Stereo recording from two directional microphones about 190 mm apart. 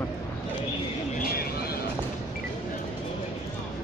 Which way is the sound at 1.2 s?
50° left (ahead or behind).